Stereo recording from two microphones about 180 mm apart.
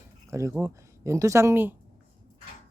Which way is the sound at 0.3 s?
15° right (ahead or behind).